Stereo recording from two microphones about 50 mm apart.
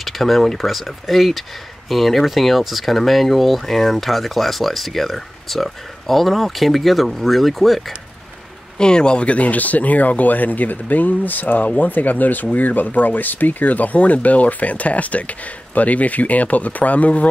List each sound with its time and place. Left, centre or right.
0.0 s speech: centre
8.7 s speech: centre